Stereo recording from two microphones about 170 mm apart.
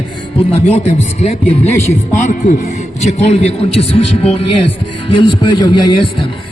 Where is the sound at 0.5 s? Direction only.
40° left (ahead or behind).